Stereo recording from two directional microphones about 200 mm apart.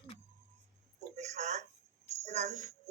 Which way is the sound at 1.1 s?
35° right (ahead or behind).